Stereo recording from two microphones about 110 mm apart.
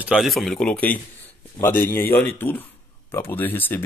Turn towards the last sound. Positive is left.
turn(degrees=15)  # may be behind; listen again after turning